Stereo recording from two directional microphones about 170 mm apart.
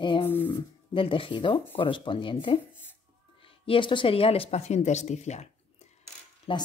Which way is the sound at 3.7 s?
30° left (ahead or behind).